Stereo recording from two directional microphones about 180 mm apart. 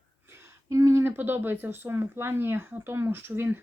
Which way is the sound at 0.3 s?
15° right (ahead or behind).